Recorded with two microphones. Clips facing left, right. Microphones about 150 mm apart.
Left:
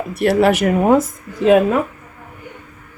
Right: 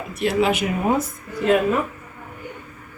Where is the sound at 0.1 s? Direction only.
65° left (ahead or behind).